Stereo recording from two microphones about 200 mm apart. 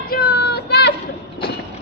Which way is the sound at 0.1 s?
50° left (ahead or behind).